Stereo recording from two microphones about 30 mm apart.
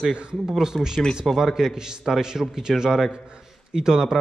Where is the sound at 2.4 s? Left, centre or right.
Centre.